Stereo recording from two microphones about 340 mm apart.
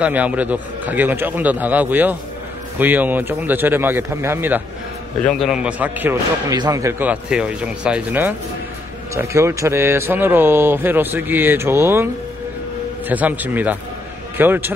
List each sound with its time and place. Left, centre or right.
0.0 s a man's voice: centre
13.1 s a man's voice: centre